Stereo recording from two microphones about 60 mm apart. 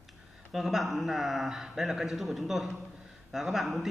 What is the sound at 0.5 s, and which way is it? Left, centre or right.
A man's voice, centre.